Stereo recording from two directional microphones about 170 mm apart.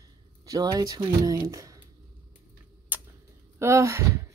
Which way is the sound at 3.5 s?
15° right (ahead or behind).